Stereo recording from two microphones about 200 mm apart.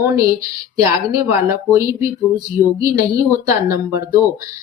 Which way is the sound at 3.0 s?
15° right (ahead or behind).